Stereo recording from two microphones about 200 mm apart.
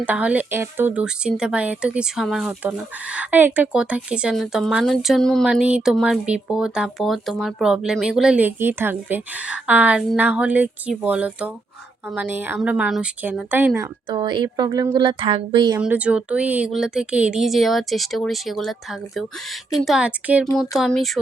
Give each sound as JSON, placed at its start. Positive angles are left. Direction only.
{"t": 0.0, "sound": "speech", "side_deg": -5}
{"t": 14.1, "sound": "speech", "side_deg": -20}
{"t": 15.8, "sound": "speech", "side_deg": -5}